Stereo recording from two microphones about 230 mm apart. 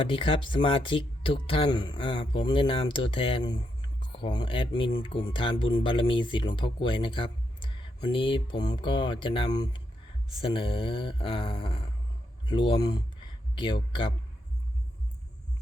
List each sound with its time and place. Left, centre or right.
0.0 s speech: left